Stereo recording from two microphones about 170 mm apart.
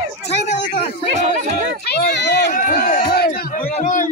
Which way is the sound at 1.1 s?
45° right (ahead or behind).